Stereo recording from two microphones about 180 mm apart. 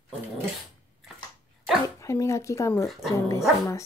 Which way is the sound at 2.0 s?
15° left (ahead or behind).